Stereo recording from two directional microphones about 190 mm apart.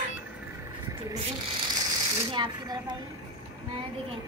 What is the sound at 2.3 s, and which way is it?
Speech, 25° right (ahead or behind).